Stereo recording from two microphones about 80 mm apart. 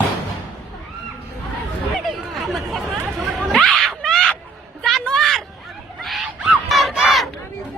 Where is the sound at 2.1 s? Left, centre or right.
Centre.